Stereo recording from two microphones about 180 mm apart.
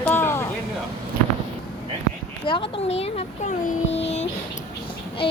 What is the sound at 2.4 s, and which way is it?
A child's voice, 30° left (ahead or behind).